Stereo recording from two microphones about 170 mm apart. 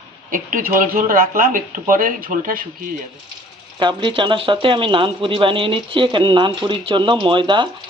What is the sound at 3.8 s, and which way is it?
Speech, 30° right (ahead or behind).